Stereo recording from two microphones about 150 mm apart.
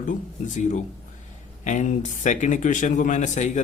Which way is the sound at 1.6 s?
55° left (ahead or behind).